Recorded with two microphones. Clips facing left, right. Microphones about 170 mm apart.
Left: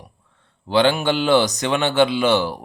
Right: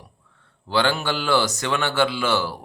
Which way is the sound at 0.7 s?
20° left (ahead or behind).